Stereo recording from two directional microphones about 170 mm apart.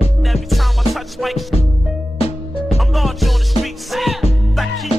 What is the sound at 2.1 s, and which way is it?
Music, 35° left (ahead or behind).